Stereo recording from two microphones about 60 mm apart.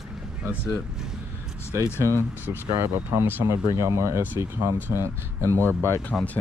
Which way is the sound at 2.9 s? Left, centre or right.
Right.